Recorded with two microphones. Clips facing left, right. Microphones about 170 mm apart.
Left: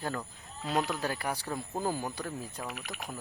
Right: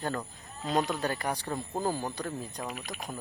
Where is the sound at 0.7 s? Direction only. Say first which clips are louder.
Right 2 dB; 5° left (ahead or behind).